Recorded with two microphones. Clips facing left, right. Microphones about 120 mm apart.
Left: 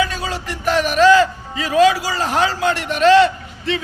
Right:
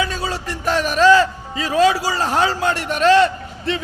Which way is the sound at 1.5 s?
30° right (ahead or behind).